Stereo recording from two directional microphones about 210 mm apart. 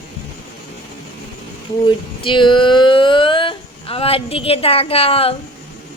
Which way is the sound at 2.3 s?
20° left (ahead or behind).